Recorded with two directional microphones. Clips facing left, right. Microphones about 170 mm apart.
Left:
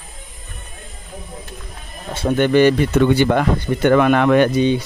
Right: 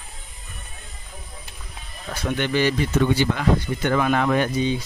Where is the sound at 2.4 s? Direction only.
55° left (ahead or behind).